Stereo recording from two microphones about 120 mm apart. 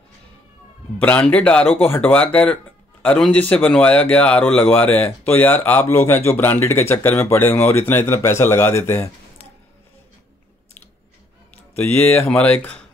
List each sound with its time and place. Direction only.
0.9 s speech: 10° left (ahead or behind)
11.7 s speech: 15° left (ahead or behind)